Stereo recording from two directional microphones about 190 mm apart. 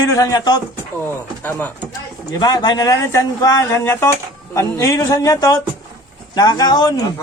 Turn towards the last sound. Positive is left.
turn(degrees=20)  # may be behind; listen again after turning